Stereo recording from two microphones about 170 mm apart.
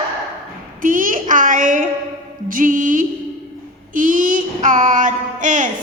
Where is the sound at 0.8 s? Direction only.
50° right (ahead or behind).